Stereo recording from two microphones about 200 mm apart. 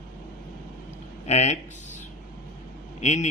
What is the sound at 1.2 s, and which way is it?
Speech, 35° left (ahead or behind).